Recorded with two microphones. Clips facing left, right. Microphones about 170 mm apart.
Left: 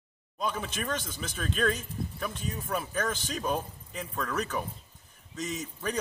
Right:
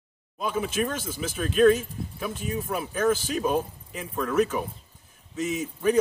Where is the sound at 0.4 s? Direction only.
5° right (ahead or behind).